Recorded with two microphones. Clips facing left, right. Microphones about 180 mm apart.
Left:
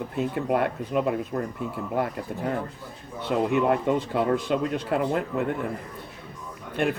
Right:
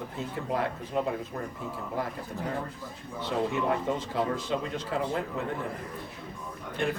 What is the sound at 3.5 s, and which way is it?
Speech, 60° left (ahead or behind).